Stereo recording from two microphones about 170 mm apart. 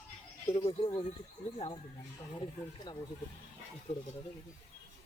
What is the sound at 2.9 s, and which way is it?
Speech, 25° left (ahead or behind).